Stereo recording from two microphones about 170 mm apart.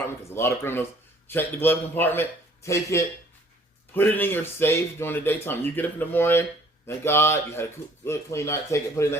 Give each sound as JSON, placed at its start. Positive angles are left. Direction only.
{"t": 0.0, "sound": "speech", "side_deg": 15}